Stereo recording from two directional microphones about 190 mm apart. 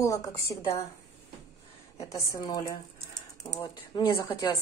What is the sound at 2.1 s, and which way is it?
Speech, 15° left (ahead or behind).